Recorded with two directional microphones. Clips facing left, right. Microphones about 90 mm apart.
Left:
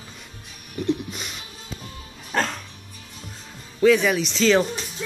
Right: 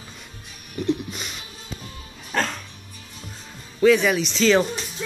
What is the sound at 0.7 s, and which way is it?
Music, centre (ahead or behind).